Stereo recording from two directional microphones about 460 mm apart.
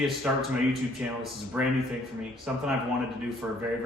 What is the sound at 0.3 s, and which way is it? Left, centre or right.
Speech, centre.